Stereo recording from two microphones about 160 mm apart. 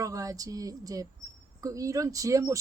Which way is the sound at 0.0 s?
20° right (ahead or behind).